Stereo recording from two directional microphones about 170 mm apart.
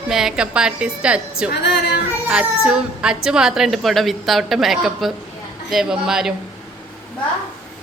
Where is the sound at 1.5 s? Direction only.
80° left.